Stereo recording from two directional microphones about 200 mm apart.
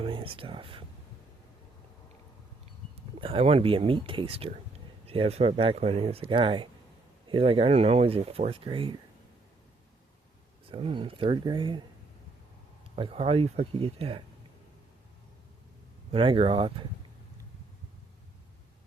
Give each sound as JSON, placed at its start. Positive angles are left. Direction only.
{"t": 0.0, "sound": "speech", "side_deg": -25}
{"t": 3.2, "sound": "speech", "side_deg": -25}
{"t": 10.7, "sound": "speech", "side_deg": -25}
{"t": 13.0, "sound": "speech", "side_deg": -30}
{"t": 16.1, "sound": "speech", "side_deg": -25}